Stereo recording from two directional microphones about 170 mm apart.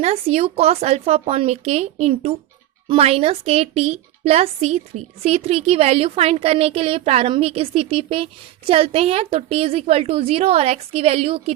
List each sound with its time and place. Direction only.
0.0 s a woman's voice: 40° right (ahead or behind)